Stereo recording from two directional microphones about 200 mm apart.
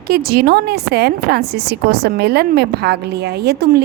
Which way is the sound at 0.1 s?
50° right (ahead or behind).